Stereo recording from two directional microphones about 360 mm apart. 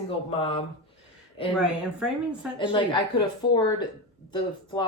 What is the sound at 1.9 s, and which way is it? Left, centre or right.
Speech, centre.